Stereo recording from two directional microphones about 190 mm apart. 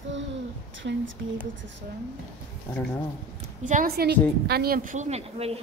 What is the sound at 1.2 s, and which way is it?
Speech, 65° right (ahead or behind).